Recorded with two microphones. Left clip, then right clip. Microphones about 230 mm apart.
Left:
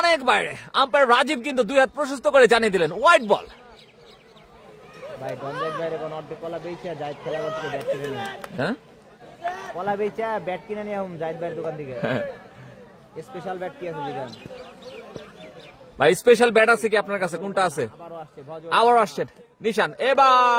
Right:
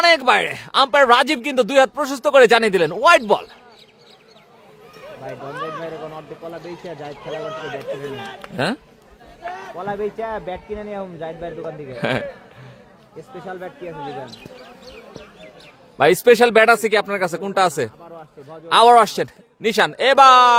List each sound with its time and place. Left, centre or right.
0.0 s speech: right
5.5 s speech: left
5.8 s a man's voice: centre
7.4 s speech: left
8.5 s a man's voice: right
9.4 s a sound: left
9.7 s speech: centre
12.0 s a man's voice: right
13.3 s a man's voice: centre
16.0 s a man's voice: right